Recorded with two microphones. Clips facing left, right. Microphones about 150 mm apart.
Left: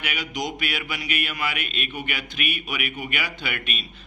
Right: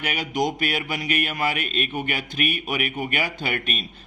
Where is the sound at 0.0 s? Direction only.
45° right (ahead or behind).